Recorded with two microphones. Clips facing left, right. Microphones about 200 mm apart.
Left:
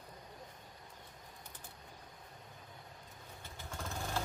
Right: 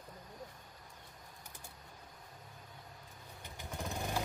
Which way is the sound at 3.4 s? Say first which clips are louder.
Right 3 dB; 15° right (ahead or behind).